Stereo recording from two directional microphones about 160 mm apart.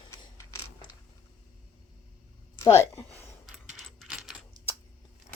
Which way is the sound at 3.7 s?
Centre (ahead or behind).